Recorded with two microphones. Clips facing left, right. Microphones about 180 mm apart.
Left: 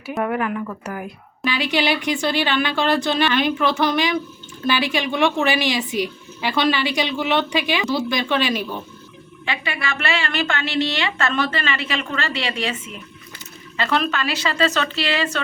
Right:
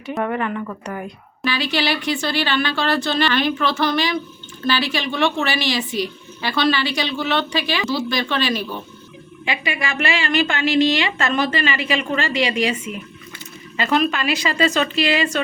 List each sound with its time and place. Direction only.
0.0 s a woman's voice: 5° left (ahead or behind)
1.5 s a woman's voice: 15° left (ahead or behind)
9.5 s a woman's voice: 15° right (ahead or behind)